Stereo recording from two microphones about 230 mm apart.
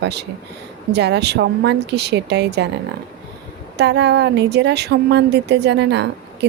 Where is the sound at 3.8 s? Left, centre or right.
Right.